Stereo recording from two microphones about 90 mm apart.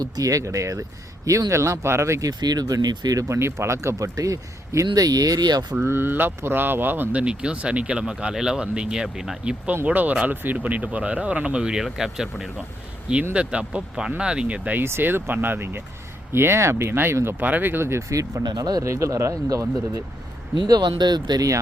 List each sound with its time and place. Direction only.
0.0 s speech: 40° right (ahead or behind)
2.4 s speech: 45° right (ahead or behind)
5.8 s speech: 25° right (ahead or behind)
18.4 s speech: 50° right (ahead or behind)
18.9 s speech: 35° right (ahead or behind)
20.6 s speech: 50° right (ahead or behind)